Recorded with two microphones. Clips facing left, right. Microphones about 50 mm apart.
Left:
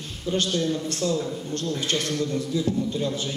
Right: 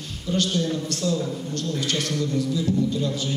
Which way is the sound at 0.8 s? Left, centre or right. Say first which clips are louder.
Even; left.